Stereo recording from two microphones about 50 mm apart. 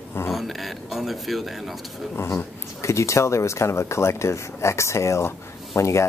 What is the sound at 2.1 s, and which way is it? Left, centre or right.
Speech, left.